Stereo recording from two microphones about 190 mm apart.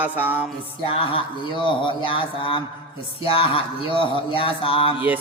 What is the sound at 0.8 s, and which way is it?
Speech, 30° left (ahead or behind).